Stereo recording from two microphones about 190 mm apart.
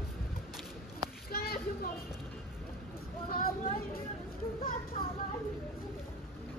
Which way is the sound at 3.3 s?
50° left (ahead or behind).